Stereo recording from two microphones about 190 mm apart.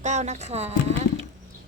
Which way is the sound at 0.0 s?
40° right (ahead or behind).